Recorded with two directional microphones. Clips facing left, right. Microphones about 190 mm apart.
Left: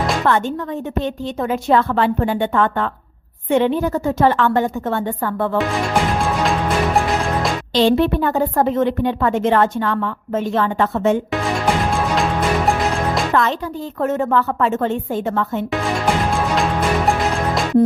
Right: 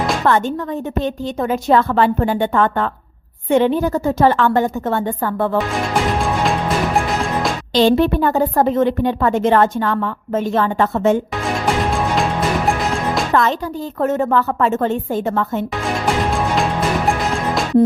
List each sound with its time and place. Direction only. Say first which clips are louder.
0.3 s a woman's voice: right 2 dB; 40° right (ahead or behind)
6.4 s music: even; centre (ahead or behind)
7.7 s a woman's voice: right 2 dB; 40° right (ahead or behind)
12.1 s music: even; centre (ahead or behind)
13.3 s a woman's voice: right 2 dB; 40° right (ahead or behind)
17.1 s music: even; centre (ahead or behind)